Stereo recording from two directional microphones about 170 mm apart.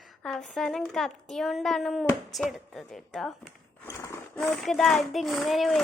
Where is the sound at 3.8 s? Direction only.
15° left (ahead or behind).